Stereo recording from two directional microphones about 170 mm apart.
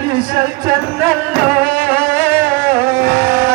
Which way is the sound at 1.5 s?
60° right (ahead or behind).